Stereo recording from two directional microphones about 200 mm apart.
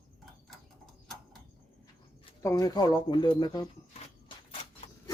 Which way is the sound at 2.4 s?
15° left (ahead or behind).